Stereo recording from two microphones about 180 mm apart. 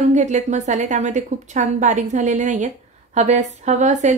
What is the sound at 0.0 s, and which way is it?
Speech, 40° right (ahead or behind).